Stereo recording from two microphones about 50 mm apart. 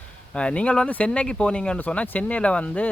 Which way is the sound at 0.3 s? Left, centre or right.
Left.